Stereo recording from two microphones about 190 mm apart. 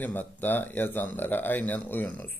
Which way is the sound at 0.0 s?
10° left (ahead or behind).